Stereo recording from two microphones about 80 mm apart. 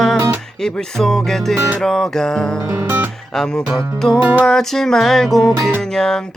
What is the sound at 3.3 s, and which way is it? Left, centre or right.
Music, centre.